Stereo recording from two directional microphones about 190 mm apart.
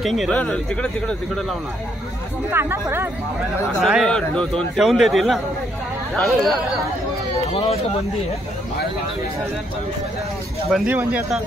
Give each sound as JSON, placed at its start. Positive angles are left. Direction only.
{"t": 0.0, "sound": "a man's voice", "side_deg": 0}
{"t": 2.5, "sound": "speech", "side_deg": -10}
{"t": 3.8, "sound": "a man's voice", "side_deg": 0}
{"t": 7.5, "sound": "speech", "side_deg": 30}
{"t": 10.7, "sound": "a man's voice", "side_deg": -5}